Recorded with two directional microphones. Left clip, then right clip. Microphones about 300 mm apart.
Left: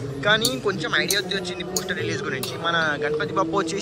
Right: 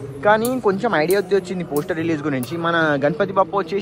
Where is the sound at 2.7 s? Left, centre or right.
Right.